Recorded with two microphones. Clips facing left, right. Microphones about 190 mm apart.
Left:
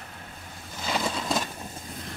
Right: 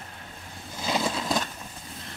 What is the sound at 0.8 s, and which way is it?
Vehicle, 10° right (ahead or behind).